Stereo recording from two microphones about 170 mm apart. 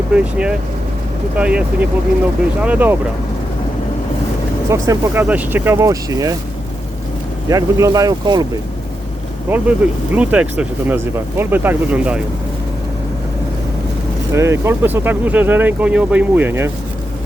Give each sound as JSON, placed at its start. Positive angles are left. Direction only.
{"t": 0.1, "sound": "speech", "side_deg": -5}
{"t": 4.7, "sound": "speech", "side_deg": -15}
{"t": 7.5, "sound": "speech", "side_deg": -20}
{"t": 9.5, "sound": "speech", "side_deg": -10}
{"t": 14.3, "sound": "speech", "side_deg": -15}